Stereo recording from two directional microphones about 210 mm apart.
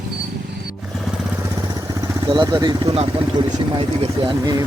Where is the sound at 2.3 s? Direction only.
20° right (ahead or behind).